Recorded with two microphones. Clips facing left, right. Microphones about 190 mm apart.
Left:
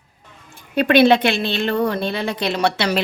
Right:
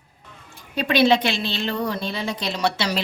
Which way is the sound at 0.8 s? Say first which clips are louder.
Left 5 dB; 60° left (ahead or behind).